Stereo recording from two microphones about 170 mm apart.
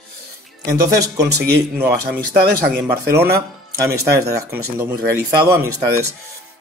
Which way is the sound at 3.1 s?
65° right (ahead or behind).